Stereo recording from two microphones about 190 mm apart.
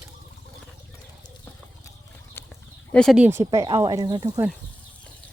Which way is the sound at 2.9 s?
5° left (ahead or behind).